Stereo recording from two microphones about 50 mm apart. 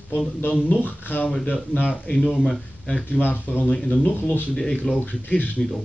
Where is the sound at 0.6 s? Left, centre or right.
Left.